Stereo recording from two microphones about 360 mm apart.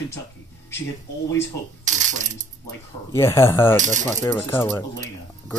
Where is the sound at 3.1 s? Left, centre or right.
Centre.